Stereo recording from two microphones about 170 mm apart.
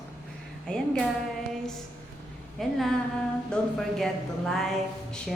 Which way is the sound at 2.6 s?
Centre (ahead or behind).